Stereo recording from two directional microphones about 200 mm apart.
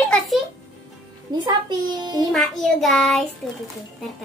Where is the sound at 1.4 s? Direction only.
20° right (ahead or behind).